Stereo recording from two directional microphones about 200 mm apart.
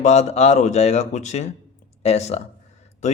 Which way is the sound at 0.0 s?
35° left (ahead or behind).